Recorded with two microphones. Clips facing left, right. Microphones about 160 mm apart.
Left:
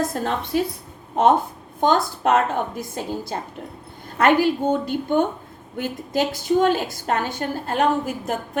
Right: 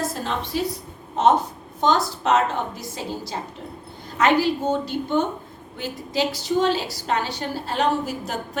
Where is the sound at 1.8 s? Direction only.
50° left (ahead or behind).